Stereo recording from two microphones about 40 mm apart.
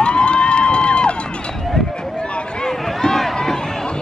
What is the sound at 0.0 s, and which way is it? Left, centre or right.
Crowd, left.